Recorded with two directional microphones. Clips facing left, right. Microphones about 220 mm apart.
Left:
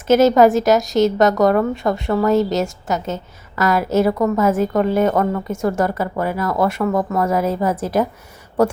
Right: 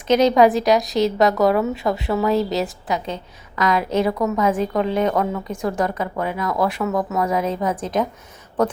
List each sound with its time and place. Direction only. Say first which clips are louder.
0.1 s a woman's voice: left 3 dB; 5° left (ahead or behind)